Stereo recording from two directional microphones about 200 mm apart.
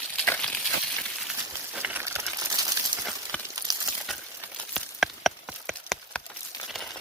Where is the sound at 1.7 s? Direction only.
10° right (ahead or behind).